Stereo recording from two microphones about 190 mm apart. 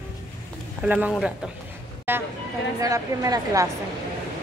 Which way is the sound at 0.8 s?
5° right (ahead or behind).